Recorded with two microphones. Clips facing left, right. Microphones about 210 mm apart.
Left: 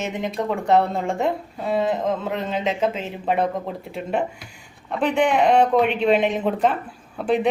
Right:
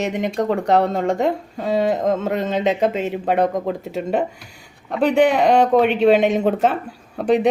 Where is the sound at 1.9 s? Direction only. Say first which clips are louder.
Right 4 dB; 40° right (ahead or behind).